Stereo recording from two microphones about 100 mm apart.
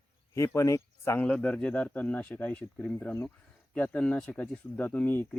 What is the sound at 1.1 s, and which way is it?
Speech, 15° left (ahead or behind).